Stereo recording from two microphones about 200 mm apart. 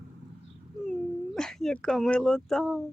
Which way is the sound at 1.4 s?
Centre (ahead or behind).